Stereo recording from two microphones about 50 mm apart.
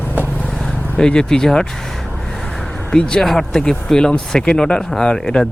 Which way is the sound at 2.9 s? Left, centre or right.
Centre.